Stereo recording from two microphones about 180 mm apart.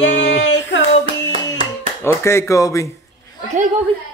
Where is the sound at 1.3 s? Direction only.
30° right (ahead or behind).